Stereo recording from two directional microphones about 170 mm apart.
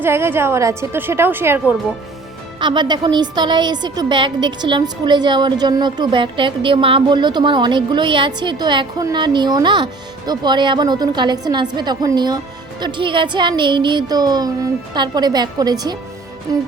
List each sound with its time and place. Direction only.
0.0 s a woman's voice: 15° right (ahead or behind)
2.6 s a woman's voice: 25° right (ahead or behind)